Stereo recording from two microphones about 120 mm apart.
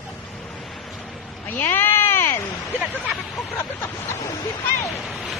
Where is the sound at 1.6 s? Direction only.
20° left (ahead or behind).